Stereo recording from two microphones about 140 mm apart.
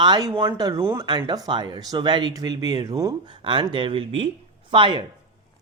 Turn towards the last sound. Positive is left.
turn(degrees=-35)  # may be behind; listen again after turning